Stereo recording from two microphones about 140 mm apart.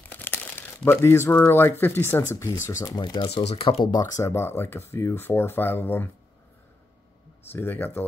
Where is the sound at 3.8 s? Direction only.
25° left (ahead or behind).